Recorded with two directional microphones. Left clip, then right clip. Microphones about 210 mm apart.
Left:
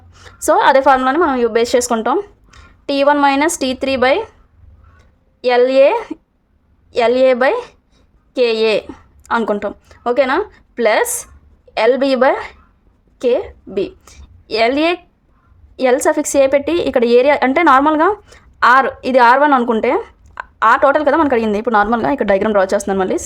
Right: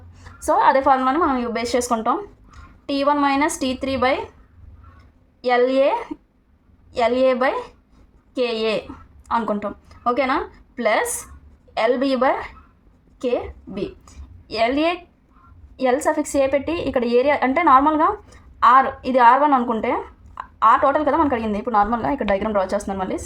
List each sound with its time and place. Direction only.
0.1 s a woman's voice: 45° left (ahead or behind)
5.4 s a woman's voice: 55° left (ahead or behind)